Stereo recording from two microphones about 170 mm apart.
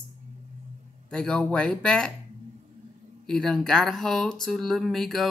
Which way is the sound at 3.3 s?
5° left (ahead or behind).